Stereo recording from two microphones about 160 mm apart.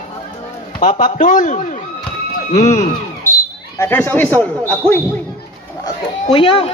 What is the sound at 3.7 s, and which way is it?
A man's voice, 15° left (ahead or behind).